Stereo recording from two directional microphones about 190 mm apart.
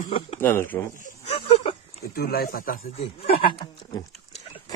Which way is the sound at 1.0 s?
40° left (ahead or behind).